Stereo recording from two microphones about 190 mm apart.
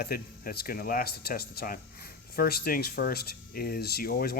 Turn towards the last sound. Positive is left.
turn(degrees=50)  # may be behind; listen again after turning